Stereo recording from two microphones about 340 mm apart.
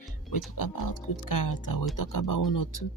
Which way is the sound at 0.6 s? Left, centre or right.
Left.